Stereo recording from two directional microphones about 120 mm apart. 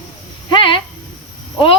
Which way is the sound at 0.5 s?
45° left (ahead or behind).